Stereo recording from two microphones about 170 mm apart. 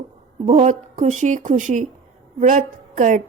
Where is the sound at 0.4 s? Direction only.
45° right (ahead or behind).